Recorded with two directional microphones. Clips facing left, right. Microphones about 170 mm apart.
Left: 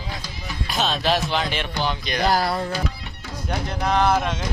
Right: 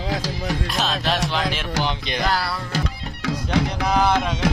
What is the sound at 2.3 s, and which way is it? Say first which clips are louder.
Music: left 4 dB; 45° left (ahead or behind).